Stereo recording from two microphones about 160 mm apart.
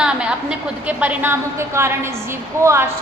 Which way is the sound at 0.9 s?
10° right (ahead or behind).